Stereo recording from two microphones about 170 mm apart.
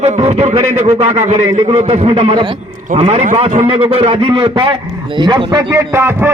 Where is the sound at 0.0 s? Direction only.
40° right (ahead or behind).